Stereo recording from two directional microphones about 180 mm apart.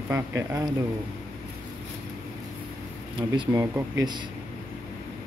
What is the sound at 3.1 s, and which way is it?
Speech, 25° right (ahead or behind).